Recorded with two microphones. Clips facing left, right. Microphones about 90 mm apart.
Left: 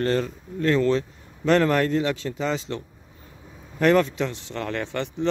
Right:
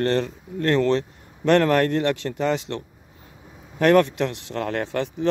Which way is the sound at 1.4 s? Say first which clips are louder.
Right 2 dB; 65° right (ahead or behind).